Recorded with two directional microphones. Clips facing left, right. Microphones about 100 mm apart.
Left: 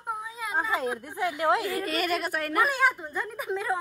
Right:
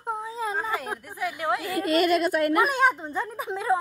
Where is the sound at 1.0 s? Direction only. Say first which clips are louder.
Left 2 dB; 20° left (ahead or behind).